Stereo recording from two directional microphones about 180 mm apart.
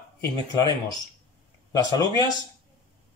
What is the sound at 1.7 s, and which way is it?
Speech, 20° left (ahead or behind).